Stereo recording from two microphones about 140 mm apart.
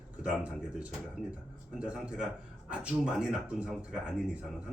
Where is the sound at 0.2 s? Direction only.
10° right (ahead or behind).